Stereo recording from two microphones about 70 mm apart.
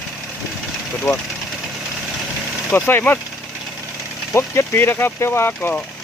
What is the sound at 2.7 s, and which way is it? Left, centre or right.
Speech, left.